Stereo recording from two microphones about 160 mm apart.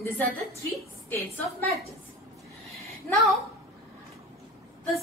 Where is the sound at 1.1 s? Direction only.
10° left (ahead or behind).